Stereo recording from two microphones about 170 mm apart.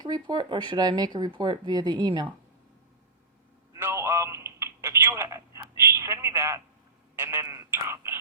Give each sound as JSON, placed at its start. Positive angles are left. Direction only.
{"t": 0.0, "sound": "speech", "side_deg": -25}
{"t": 3.8, "sound": "telephone", "side_deg": -15}
{"t": 7.2, "sound": "a sound", "side_deg": -15}